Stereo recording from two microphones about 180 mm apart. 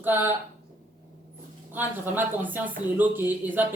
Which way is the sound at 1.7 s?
10° right (ahead or behind).